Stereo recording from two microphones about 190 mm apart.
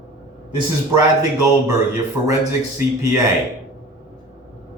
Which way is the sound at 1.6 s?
15° right (ahead or behind).